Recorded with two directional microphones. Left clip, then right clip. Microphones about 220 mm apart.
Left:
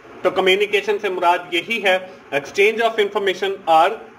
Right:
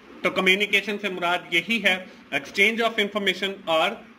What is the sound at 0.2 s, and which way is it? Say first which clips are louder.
Speech: left 5 dB; 50° right (ahead or behind).